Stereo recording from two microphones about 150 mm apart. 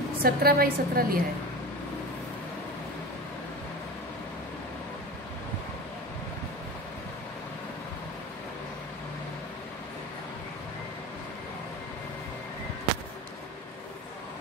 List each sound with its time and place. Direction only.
0.2 s a woman's voice: 90° right